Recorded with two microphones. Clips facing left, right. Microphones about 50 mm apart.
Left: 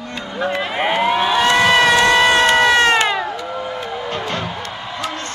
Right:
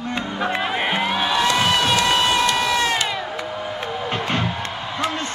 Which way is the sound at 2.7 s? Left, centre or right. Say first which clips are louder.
Left 7 dB; left.